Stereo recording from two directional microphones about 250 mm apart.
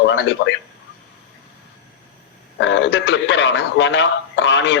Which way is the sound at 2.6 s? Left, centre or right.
Left.